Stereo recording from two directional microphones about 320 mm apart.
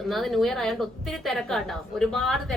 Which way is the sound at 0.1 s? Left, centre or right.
Centre.